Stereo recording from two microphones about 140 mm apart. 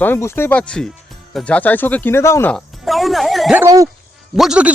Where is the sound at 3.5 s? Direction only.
25° right (ahead or behind).